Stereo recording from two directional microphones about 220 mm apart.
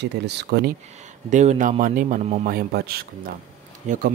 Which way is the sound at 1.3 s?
35° right (ahead or behind).